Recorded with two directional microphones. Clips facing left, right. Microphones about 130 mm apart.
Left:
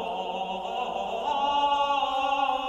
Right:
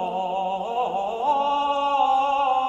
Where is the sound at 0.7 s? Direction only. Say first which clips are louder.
Right 5 dB; 45° right (ahead or behind).